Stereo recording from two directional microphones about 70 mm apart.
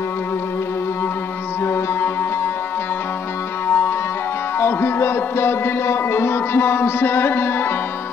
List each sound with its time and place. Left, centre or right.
1.6 s music: left
3.6 s music: left